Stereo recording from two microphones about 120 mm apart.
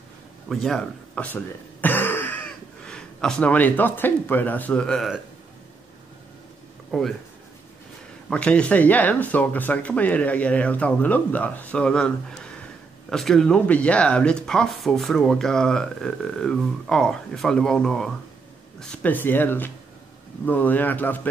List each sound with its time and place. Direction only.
0.5 s speech: 5° left (ahead or behind)
6.9 s speech: centre (ahead or behind)
8.3 s speech: 10° left (ahead or behind)
19.1 s speech: 15° left (ahead or behind)